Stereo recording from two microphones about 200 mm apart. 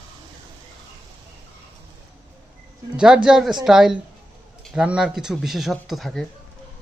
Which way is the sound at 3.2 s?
Centre (ahead or behind).